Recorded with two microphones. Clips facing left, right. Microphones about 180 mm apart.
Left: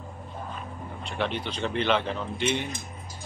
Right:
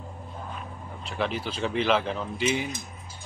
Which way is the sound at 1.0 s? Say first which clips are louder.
Right 1 dB; centre (ahead or behind).